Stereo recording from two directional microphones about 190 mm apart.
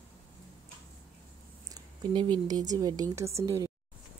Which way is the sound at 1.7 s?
25° right (ahead or behind).